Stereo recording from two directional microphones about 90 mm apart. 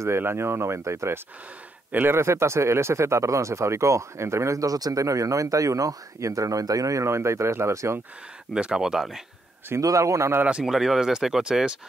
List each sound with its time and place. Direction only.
0.0 s speech: 30° right (ahead or behind)
1.9 s speech: 20° right (ahead or behind)
2.1 s speech: 30° right (ahead or behind)
8.5 s speech: 10° right (ahead or behind)
9.8 s speech: 35° right (ahead or behind)
10.6 s speech: 5° right (ahead or behind)